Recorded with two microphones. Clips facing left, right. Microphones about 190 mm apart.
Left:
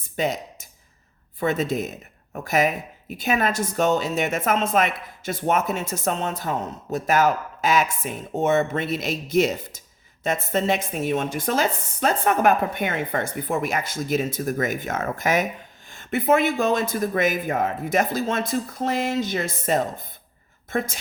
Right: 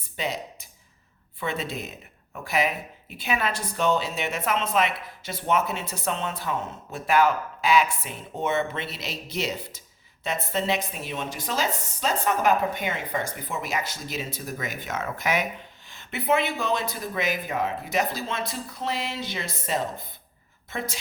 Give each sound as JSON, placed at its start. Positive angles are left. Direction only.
{"t": 0.2, "sound": "speech", "side_deg": 45}